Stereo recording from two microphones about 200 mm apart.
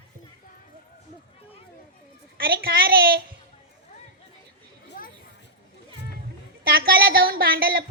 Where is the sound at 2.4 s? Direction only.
50° right (ahead or behind).